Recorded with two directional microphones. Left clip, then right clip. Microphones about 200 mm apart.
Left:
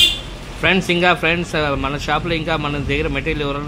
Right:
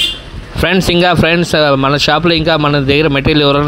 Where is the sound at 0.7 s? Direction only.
40° right (ahead or behind).